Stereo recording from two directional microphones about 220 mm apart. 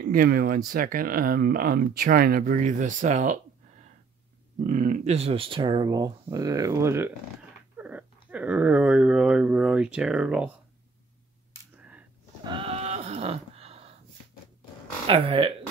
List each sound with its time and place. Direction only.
0.0 s speech: 40° right (ahead or behind)
4.6 s speech: 35° right (ahead or behind); by 7.2 s 10° right (ahead or behind)
7.7 s a sound: 5° right (ahead or behind)
8.3 s speech: 5° right (ahead or behind)
12.4 s sheep: 25° right (ahead or behind)
15.0 s speech: 25° right (ahead or behind)